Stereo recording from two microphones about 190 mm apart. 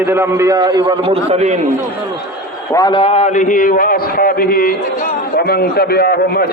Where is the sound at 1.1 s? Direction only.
35° right (ahead or behind).